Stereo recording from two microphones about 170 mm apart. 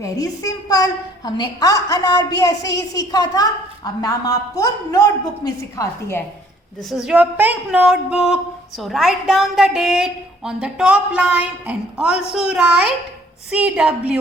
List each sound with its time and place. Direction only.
0.0 s a woman's voice: 20° left (ahead or behind)
6.9 s a woman's voice: 5° right (ahead or behind)